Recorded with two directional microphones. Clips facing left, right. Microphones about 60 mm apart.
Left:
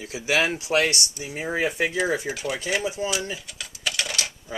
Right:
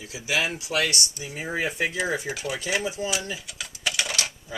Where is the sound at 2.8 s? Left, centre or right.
Left.